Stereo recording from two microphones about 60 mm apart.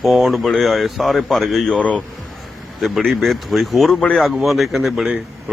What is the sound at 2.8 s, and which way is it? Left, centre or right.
A man's voice, centre.